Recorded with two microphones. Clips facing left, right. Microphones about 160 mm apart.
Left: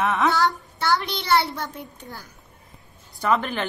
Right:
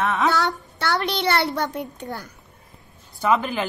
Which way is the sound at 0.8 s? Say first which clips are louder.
Even; 70° right (ahead or behind).